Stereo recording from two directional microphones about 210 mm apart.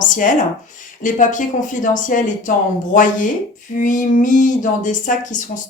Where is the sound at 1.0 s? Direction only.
40° left (ahead or behind).